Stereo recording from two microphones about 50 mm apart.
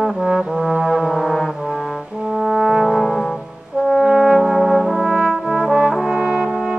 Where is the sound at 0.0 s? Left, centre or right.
Centre.